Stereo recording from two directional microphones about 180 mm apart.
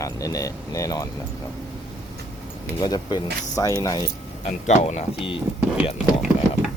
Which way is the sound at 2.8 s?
20° left (ahead or behind).